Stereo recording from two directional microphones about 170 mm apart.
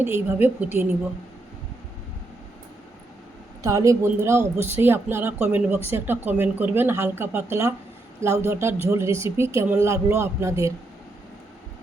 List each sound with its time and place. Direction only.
0.0 s speech: 15° right (ahead or behind)
3.6 s speech: 20° right (ahead or behind)